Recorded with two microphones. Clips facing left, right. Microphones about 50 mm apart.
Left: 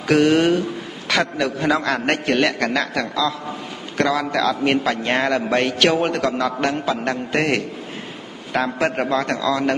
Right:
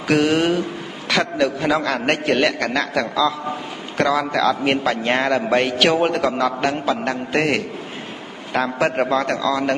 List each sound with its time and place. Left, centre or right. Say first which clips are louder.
0.1 s a man's voice: left 2 dB; centre